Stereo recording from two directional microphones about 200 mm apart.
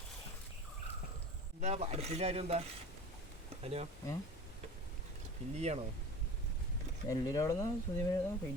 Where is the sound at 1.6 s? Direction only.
35° right (ahead or behind).